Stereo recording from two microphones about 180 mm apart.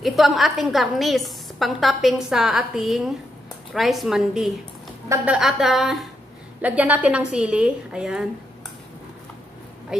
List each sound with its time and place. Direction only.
0.0 s a woman's voice: centre (ahead or behind)
5.0 s a woman's voice: 15° right (ahead or behind)
5.3 s a woman's voice: centre (ahead or behind)